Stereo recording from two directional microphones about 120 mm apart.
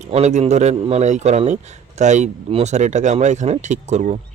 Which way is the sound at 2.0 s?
80° right.